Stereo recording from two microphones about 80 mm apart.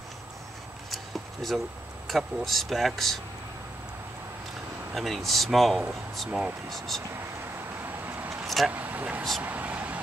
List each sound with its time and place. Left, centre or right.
0.8 s a sound: centre
2.0 s speech: centre
4.9 s speech: centre
8.3 s vehicle: centre
8.7 s speech: right